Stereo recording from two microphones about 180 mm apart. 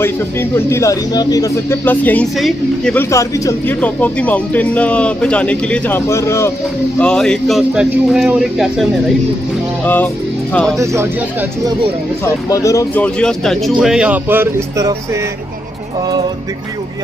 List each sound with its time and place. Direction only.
0.0 s speech: 15° left (ahead or behind)
7.0 s speech: 5° left (ahead or behind)
10.8 s speech: 15° right (ahead or behind)
12.4 s speech: 20° left (ahead or behind)
13.0 s speech: 5° left (ahead or behind); by 15.0 s 15° right (ahead or behind)